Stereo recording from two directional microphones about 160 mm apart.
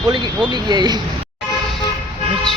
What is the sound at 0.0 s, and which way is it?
Speech, 30° right (ahead or behind).